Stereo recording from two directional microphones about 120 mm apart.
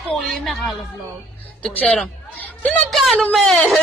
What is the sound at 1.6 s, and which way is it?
Speech, 10° left (ahead or behind).